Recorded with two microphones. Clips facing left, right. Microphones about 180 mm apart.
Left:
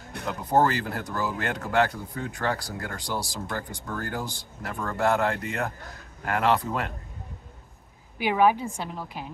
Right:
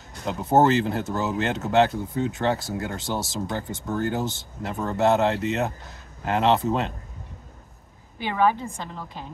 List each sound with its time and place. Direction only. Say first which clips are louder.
0.2 s speech: right 3 dB; 25° right (ahead or behind)
8.2 s a woman's voice: left 1 dB; 10° left (ahead or behind)